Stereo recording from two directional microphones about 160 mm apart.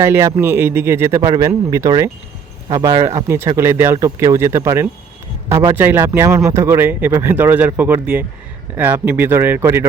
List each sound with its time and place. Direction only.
0.0 s a man's voice: 15° right (ahead or behind)